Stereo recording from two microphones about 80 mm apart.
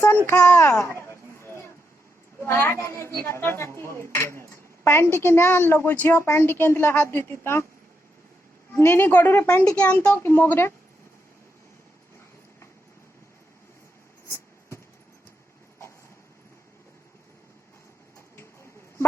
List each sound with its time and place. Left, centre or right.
0.3 s a woman's voice: left
1.4 s a sound: left
2.4 s a woman's voice: left
8.7 s a woman's voice: left; by 10.2 s centre
10.2 s a woman's voice: left